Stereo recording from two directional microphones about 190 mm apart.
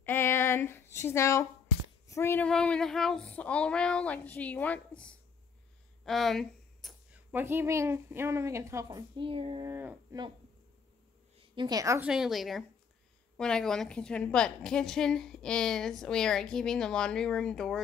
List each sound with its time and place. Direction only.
0.0 s a sound: 10° left (ahead or behind)
2.0 s female singing: 15° left (ahead or behind)
6.0 s speech: centre (ahead or behind); by 9.7 s 30° right (ahead or behind)
9.7 s speech: 10° right (ahead or behind)
11.3 s a woman's voice: 25° right (ahead or behind)
12.1 s a woman's voice: centre (ahead or behind)